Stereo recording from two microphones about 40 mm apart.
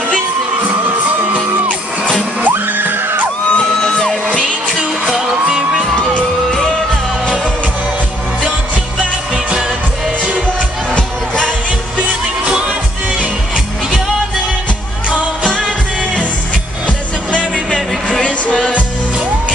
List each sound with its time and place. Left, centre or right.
2.5 s music: right
3.5 s music: left
5.3 s music: centre
9.3 s music: right
11.0 s music: left
17.6 s music: left